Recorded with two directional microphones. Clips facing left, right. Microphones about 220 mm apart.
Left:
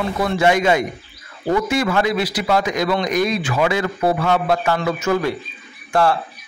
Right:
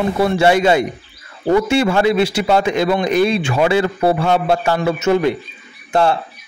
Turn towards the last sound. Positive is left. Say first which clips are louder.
# right 2 dB
turn(degrees=-25)  # may be behind; listen again after turning